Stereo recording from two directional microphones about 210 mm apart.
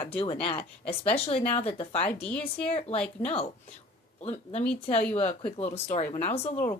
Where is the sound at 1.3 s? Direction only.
30° left (ahead or behind).